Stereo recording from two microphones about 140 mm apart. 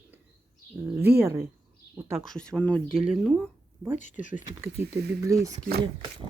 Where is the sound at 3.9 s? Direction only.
65° left (ahead or behind).